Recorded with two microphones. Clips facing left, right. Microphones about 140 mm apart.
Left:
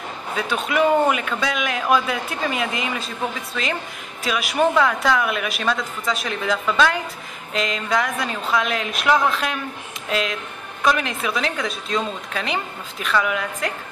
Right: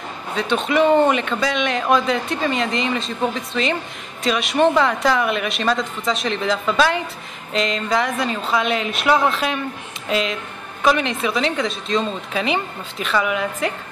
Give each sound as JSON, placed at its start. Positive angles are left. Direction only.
{"t": 0.4, "sound": "a woman's voice", "side_deg": 5}